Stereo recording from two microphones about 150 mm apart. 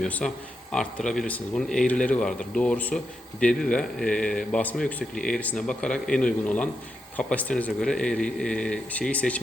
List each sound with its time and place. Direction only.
0.0 s a man's voice: 10° left (ahead or behind)